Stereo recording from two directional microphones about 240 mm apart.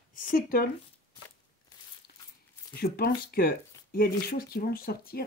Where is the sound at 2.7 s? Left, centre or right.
Left.